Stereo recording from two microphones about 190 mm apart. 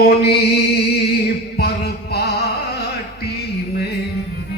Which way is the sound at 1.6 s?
55° left (ahead or behind).